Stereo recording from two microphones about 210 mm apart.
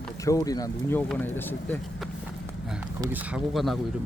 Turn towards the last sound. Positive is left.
turn(degrees=0)  # may be behind; listen again after turning